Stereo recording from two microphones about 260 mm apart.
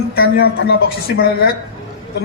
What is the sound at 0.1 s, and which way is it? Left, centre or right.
A man's voice, left.